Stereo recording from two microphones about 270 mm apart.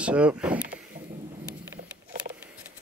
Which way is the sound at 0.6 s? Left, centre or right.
Right.